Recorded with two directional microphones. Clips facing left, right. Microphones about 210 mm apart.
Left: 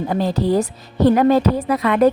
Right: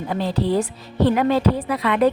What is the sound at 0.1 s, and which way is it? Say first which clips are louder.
A woman's voice: left 2 dB; 45° left (ahead or behind).